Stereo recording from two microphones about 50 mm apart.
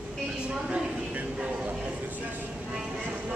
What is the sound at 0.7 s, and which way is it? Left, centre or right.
Vehicle, right.